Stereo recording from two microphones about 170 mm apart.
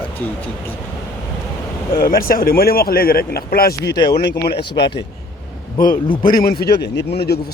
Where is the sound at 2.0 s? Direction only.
60° left (ahead or behind); by 4.9 s 80° left.